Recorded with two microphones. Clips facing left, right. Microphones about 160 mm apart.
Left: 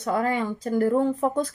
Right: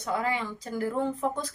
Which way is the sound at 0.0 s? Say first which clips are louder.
Left 5 dB; 50° left (ahead or behind).